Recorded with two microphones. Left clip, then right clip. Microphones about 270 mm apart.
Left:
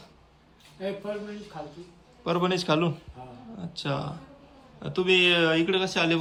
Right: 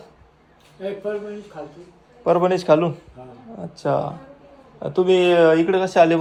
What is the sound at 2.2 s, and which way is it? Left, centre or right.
Speech, centre.